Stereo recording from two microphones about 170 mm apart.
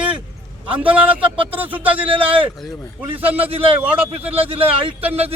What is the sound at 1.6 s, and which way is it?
Speech, 10° right (ahead or behind).